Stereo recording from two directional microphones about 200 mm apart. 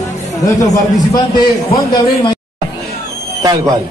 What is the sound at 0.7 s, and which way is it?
A man's voice, 20° left (ahead or behind).